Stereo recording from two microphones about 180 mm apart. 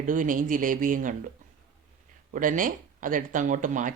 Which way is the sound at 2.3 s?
50° right (ahead or behind).